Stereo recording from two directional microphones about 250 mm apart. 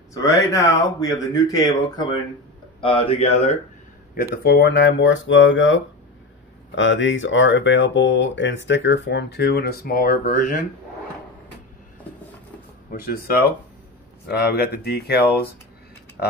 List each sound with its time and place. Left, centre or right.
0.1 s speech: centre
4.4 s speech: left
12.9 s speech: left
14.2 s speech: left